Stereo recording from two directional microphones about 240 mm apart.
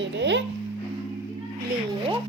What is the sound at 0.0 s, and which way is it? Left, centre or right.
Speech, right.